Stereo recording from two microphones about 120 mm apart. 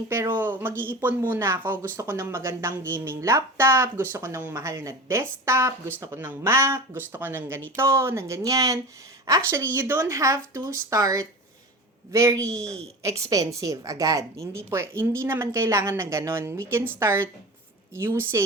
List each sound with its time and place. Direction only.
0.1 s a woman's voice: 20° right (ahead or behind)